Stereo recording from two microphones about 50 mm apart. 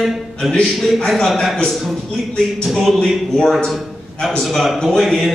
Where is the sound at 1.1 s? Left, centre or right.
Centre.